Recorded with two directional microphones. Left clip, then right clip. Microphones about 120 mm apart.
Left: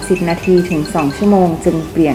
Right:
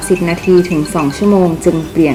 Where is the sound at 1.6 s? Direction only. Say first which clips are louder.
Right 2 dB; 20° right (ahead or behind).